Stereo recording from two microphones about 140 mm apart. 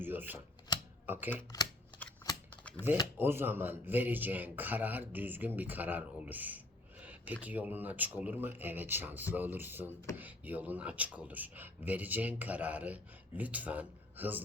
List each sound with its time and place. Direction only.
0.0 s shuffling cards: 15° right (ahead or behind)
0.7 s typewriter: 30° left (ahead or behind)
1.0 s speech: 15° right (ahead or behind)
2.5 s typewriter: 10° left (ahead or behind)
3.2 s speech: 15° right (ahead or behind)
7.0 s a sound: 10° right (ahead or behind)
7.4 s speech: 10° right (ahead or behind)